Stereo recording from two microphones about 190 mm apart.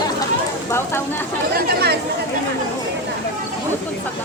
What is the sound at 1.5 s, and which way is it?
Chatter, 60° right (ahead or behind).